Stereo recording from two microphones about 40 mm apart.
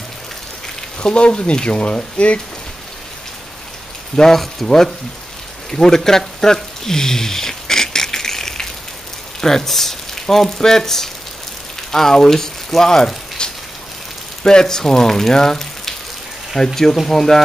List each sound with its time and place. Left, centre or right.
0.9 s speech: left
4.2 s speech: centre
5.7 s a sound: centre
9.4 s speech: centre